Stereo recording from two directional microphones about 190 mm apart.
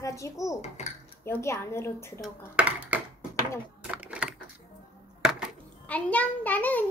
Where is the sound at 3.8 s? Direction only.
5° right (ahead or behind).